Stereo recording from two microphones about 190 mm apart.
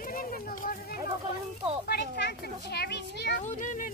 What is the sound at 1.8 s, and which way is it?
A child's voice, 60° left (ahead or behind).